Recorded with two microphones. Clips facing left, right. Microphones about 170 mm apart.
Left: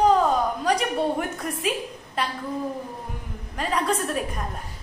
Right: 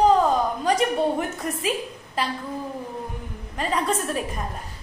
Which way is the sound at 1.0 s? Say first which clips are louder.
Right 1 dB; centre (ahead or behind).